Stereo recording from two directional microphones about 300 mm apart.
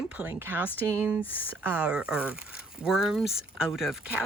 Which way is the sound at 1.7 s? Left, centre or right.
Centre.